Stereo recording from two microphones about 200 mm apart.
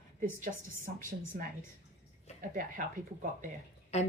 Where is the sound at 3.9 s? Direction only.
35° left (ahead or behind).